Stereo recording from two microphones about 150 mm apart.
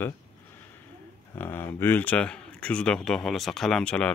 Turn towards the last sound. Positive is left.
turn(degrees=5)  # may be behind; listen again after turning